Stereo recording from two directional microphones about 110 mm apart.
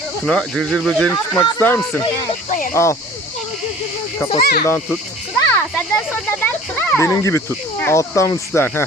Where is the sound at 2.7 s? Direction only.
25° left (ahead or behind).